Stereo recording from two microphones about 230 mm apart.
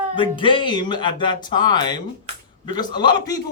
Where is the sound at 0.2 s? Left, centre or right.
Left.